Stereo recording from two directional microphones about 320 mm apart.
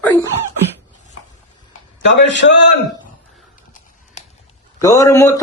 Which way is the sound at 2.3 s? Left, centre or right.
Left.